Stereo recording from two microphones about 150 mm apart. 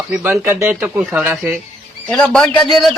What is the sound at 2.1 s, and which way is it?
Speech, 5° left (ahead or behind).